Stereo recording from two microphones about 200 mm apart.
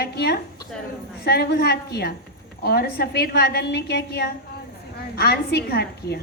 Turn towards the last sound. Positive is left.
turn(degrees=55)  # may be behind; listen again after turning